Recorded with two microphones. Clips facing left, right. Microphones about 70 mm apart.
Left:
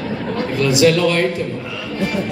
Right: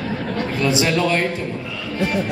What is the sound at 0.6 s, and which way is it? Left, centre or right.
Speech, right.